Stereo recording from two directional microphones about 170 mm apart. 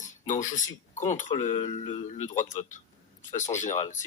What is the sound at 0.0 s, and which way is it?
Speech, 45° left (ahead or behind).